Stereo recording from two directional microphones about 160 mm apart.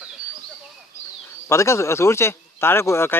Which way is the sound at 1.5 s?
15° left (ahead or behind).